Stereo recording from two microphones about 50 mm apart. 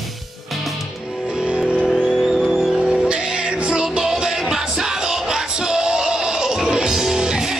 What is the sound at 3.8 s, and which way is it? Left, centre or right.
Music, centre.